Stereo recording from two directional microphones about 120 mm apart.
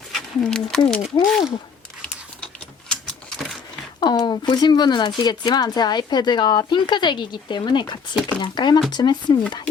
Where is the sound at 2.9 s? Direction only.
5° left (ahead or behind).